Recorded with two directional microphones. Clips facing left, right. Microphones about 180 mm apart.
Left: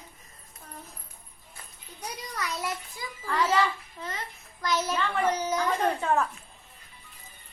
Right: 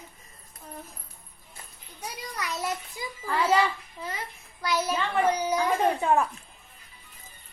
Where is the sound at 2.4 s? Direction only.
20° right (ahead or behind).